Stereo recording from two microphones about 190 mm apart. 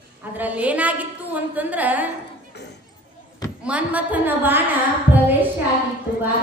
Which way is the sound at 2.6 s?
60° left (ahead or behind).